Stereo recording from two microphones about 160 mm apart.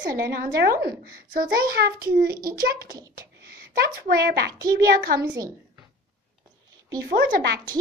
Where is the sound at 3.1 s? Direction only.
65° right (ahead or behind).